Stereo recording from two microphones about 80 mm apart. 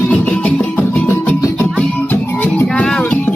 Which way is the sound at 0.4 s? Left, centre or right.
Centre.